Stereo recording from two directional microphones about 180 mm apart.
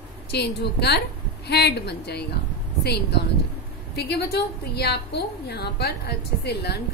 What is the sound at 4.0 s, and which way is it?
A woman's voice, 65° left (ahead or behind).